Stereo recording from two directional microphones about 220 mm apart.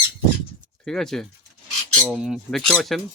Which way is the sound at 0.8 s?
Centre (ahead or behind).